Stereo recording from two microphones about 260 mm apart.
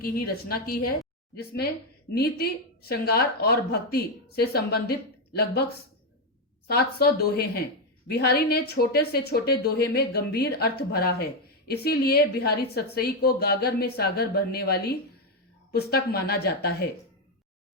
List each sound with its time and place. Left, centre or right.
0.0 s a woman's voice: left
2.1 s a woman's voice: left
6.7 s a woman's voice: left